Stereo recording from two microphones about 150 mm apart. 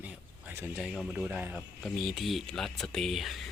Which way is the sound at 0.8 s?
5° right (ahead or behind).